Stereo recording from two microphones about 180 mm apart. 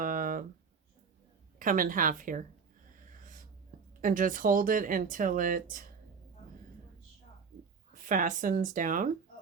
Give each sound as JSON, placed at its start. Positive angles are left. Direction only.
{"t": 0.0, "sound": "a sound", "side_deg": -50}
{"t": 1.5, "sound": "speech", "side_deg": -50}
{"t": 3.1, "sound": "wheeze", "side_deg": -45}
{"t": 4.0, "sound": "speech", "side_deg": -50}
{"t": 7.9, "sound": "speech", "side_deg": -45}